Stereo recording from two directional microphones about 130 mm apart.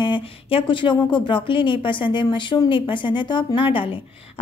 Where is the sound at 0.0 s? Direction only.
40° left (ahead or behind).